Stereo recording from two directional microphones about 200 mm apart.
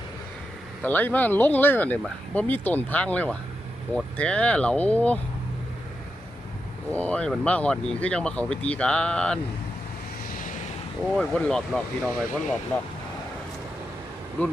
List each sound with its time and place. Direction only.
0.8 s speech: 10° left (ahead or behind)
6.9 s speech: 5° left (ahead or behind)
10.2 s vehicle: 40° left (ahead or behind)
11.1 s speech: 5° left (ahead or behind)
14.4 s speech: 5° left (ahead or behind)